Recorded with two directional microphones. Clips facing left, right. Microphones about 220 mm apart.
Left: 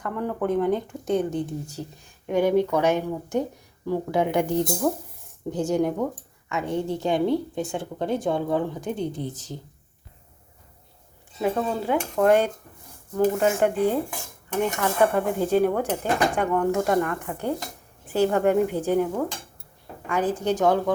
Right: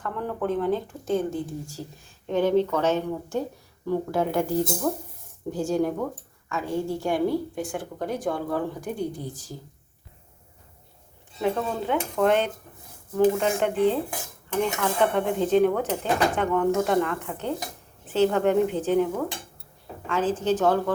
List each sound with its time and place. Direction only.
0.0 s a woman's voice: 15° left (ahead or behind)
11.3 s speech: 5° left (ahead or behind)
20.1 s speech: 15° left (ahead or behind)